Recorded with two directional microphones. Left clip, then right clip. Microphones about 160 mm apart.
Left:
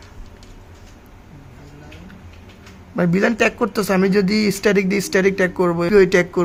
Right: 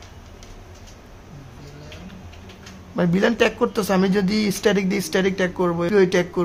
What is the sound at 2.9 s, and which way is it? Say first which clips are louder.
A man's voice: left 2 dB; 20° left (ahead or behind).